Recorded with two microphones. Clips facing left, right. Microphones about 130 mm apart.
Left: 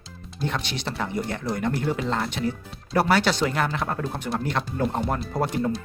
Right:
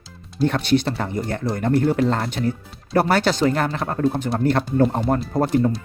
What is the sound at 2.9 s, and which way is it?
Speech, 50° right (ahead or behind).